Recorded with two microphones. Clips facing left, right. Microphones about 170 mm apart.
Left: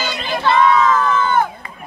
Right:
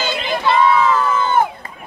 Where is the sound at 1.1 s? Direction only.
25° right (ahead or behind).